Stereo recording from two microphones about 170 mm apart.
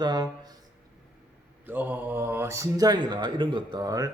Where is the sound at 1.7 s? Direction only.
10° right (ahead or behind).